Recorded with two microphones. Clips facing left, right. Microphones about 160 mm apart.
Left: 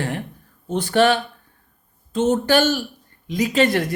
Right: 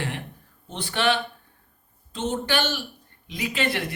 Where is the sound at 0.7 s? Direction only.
45° left (ahead or behind).